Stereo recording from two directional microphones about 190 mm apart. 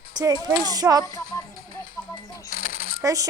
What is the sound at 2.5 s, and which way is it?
Coin, 45° left (ahead or behind).